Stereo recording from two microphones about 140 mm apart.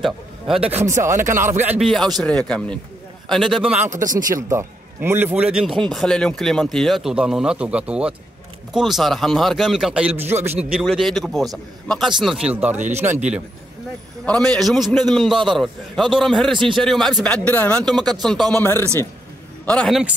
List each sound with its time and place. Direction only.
0.0 s a man's voice: centre (ahead or behind)
1.2 s speech: 20° right (ahead or behind)
1.8 s a man's voice: centre (ahead or behind)
3.8 s speech: 65° right (ahead or behind)
4.3 s a man's voice: 20° right (ahead or behind)
10.6 s a man's voice: 5° right (ahead or behind)
14.2 s a man's voice: 5° left (ahead or behind)
19.9 s a man's voice: 5° right (ahead or behind)